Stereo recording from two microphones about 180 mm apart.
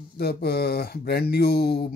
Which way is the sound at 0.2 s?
60° left (ahead or behind).